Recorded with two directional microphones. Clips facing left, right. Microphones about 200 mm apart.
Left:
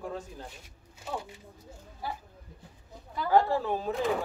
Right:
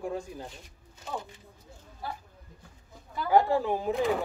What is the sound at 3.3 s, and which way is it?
Speech, 15° right (ahead or behind).